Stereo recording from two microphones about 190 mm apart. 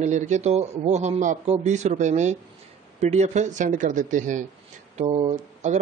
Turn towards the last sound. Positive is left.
turn(degrees=-35)  # may be behind; listen again after turning